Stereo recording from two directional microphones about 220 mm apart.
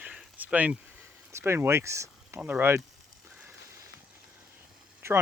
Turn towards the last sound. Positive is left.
turn(degrees=-10)  # may be behind; listen again after turning